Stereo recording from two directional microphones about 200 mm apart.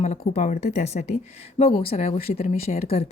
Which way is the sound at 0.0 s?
35° left (ahead or behind).